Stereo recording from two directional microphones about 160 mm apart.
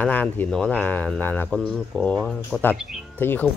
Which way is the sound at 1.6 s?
5° right (ahead or behind).